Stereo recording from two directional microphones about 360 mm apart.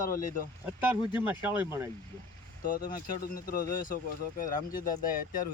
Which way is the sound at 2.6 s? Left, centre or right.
Left.